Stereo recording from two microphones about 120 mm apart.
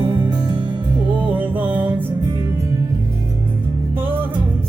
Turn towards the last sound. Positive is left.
turn(degrees=-15)  # may be behind; listen again after turning